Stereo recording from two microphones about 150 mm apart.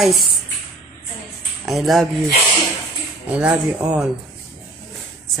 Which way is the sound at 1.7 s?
Centre (ahead or behind).